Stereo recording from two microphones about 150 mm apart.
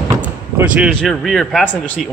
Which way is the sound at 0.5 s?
10° right (ahead or behind).